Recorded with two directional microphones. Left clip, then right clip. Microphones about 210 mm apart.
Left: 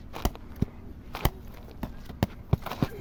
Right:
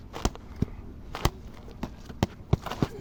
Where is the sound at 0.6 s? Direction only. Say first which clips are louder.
Even; 10° left (ahead or behind).